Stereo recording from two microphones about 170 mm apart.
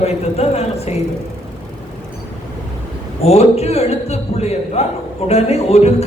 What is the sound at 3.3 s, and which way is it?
A woman's voice, 35° left (ahead or behind).